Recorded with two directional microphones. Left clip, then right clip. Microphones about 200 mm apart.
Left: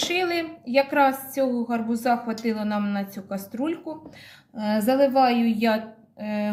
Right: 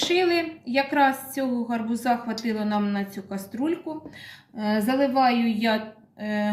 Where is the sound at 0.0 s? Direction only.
30° left (ahead or behind).